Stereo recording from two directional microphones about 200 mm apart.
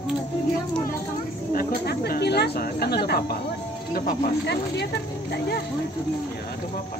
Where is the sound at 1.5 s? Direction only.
55° left (ahead or behind).